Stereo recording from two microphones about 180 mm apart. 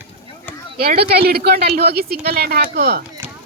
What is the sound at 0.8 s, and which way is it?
Speech, 60° right (ahead or behind).